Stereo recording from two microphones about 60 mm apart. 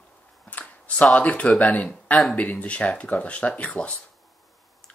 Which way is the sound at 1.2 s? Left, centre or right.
Left.